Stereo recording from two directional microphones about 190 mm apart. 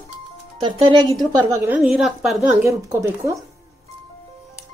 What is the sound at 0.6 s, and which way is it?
Speech, 25° right (ahead or behind).